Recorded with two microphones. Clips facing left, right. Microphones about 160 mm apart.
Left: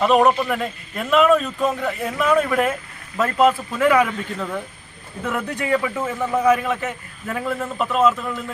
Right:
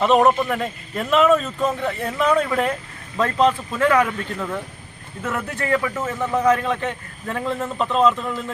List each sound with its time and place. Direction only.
0.0 s a man's voice: centre (ahead or behind)
5.2 s a man's voice: 15° left (ahead or behind)